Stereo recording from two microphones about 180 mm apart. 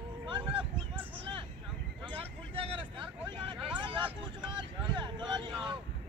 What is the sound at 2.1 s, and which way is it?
Vehicle, 30° right (ahead or behind).